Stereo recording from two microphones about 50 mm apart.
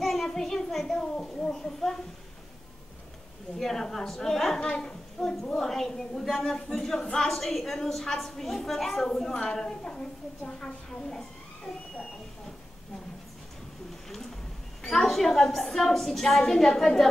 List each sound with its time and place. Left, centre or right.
0.0 s child singing: centre
0.9 s a woman's voice: centre
3.5 s a woman's voice: centre
4.6 s a woman's voice: centre
5.2 s a woman's voice: centre
11.1 s a sound: centre
14.8 s a woman's voice: centre